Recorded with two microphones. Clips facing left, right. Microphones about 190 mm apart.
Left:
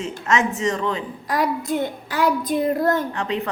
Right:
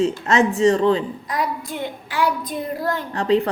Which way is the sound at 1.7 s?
45° left (ahead or behind).